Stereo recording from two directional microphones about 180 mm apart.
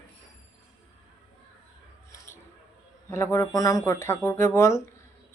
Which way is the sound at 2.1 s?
15° left (ahead or behind).